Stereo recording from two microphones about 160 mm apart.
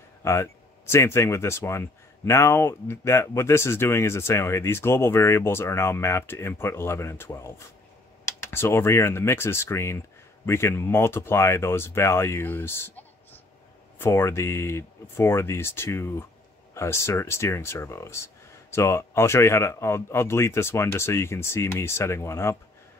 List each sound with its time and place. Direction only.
0.2 s speech: 15° left (ahead or behind)